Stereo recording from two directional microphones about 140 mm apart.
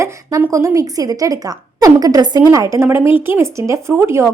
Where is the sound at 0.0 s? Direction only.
25° right (ahead or behind).